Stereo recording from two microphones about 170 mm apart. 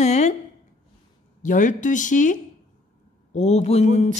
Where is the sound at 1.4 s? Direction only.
50° left (ahead or behind).